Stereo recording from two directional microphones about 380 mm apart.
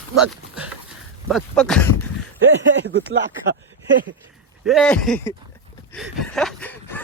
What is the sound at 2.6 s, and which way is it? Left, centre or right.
Speech, right.